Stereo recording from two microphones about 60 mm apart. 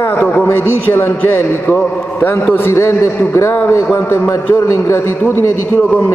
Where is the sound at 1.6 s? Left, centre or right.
Left.